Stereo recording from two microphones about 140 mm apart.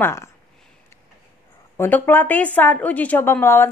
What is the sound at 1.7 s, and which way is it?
A woman's voice, 15° left (ahead or behind).